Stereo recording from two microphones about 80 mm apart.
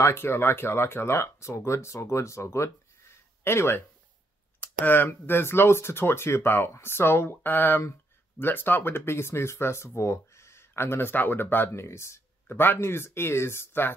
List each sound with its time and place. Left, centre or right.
0.0 s speech: left